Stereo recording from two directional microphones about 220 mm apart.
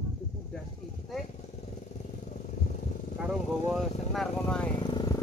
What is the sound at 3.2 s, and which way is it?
Vehicle, centre (ahead or behind).